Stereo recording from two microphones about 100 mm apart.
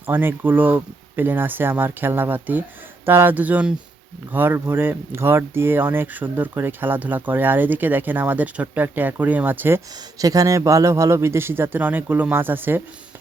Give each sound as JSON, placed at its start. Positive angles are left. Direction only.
{"t": 0.0, "sound": "speech", "side_deg": -20}
{"t": 10.2, "sound": "speech", "side_deg": -35}